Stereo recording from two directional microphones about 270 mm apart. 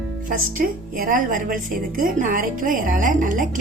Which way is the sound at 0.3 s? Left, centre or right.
Right.